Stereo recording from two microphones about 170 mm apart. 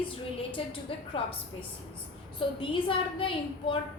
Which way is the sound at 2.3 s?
30° left (ahead or behind).